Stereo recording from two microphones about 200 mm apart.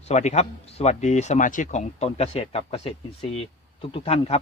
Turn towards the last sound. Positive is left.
turn(degrees=30)  # may be behind; listen again after turning